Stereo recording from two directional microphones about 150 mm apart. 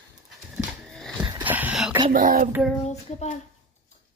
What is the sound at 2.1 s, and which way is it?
Child singing, 65° right (ahead or behind).